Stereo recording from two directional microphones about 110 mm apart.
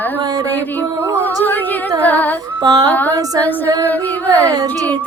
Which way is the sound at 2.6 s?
35° right (ahead or behind).